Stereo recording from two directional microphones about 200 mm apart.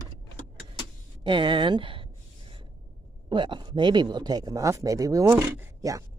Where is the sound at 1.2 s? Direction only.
25° right (ahead or behind).